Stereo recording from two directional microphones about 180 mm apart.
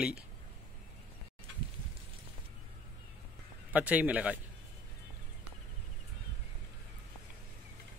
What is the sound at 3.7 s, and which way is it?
Speech, 10° right (ahead or behind).